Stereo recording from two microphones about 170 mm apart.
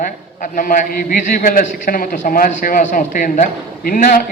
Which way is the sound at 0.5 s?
55° left (ahead or behind).